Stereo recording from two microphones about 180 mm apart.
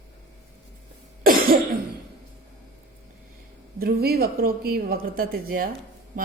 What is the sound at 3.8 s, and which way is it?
A woman's voice, 60° right (ahead or behind).